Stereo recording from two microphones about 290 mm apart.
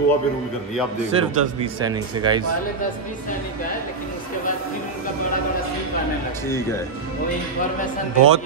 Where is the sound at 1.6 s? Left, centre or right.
Centre.